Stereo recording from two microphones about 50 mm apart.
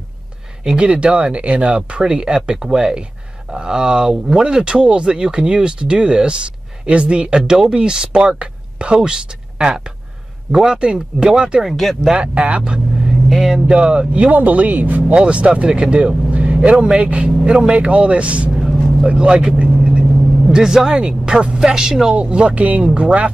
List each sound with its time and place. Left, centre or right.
0.7 s speech: right
11.6 s speech: centre
12.2 s speech: right
13.3 s speech: centre
13.7 s speech: centre; by 15.1 s right
15.1 s speech: right
19.6 s vehicle: right
20.4 s speech: centre